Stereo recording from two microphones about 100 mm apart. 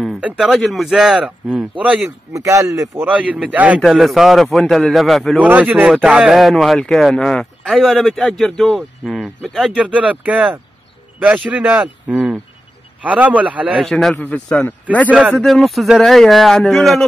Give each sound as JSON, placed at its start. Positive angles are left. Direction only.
{"t": 0.4, "sound": "speech", "side_deg": 0}
{"t": 2.3, "sound": "speech", "side_deg": -30}
{"t": 3.0, "sound": "speech", "side_deg": -15}
{"t": 3.8, "sound": "speech", "side_deg": -5}
{"t": 5.4, "sound": "speech", "side_deg": -15}
{"t": 9.7, "sound": "speech", "side_deg": -10}
{"t": 13.7, "sound": "speech", "side_deg": 5}
{"t": 14.1, "sound": "a man's voice", "side_deg": 15}
{"t": 15.0, "sound": "speech", "side_deg": -15}
{"t": 15.4, "sound": "speech", "side_deg": 0}